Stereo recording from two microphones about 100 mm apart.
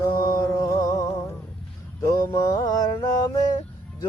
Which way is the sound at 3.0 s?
40° left (ahead or behind).